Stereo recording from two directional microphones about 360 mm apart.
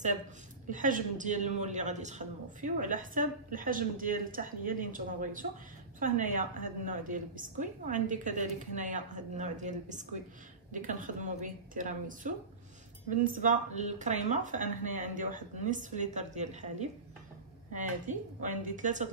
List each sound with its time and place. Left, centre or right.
0.7 s a man's voice: right
17.7 s a man's voice: right